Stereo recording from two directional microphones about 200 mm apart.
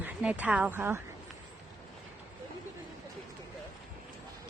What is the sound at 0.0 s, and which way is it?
Speech, 5° right (ahead or behind).